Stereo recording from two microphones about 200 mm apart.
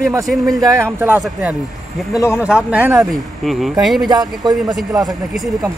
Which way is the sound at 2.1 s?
15° left (ahead or behind).